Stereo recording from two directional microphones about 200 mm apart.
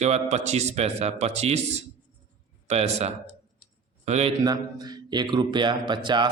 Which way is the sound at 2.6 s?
30° right (ahead or behind).